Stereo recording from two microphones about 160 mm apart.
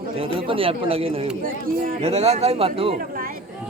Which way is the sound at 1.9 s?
40° right (ahead or behind).